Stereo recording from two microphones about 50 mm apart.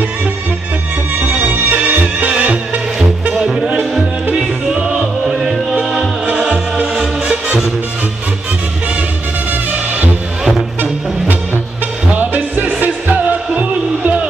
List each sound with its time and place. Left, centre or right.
1.2 s music: right
4.4 s music: centre
12.1 s music: right